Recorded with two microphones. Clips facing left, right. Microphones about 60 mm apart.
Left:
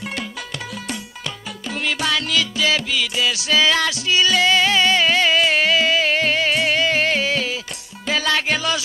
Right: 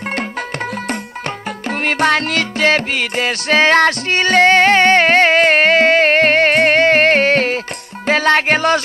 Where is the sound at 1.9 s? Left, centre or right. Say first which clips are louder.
Right 7 dB; right.